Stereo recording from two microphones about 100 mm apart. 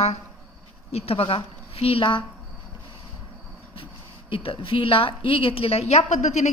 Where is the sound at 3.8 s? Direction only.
65° left (ahead or behind); by 6.0 s 90° left.